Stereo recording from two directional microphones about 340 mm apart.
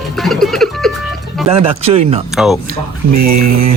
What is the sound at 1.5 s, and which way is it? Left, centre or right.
Speech, centre.